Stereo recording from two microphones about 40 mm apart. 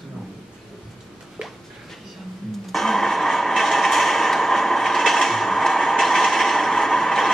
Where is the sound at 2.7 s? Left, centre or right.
Centre.